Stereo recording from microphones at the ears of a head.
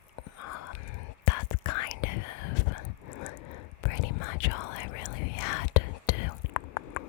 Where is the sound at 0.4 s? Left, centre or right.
Left.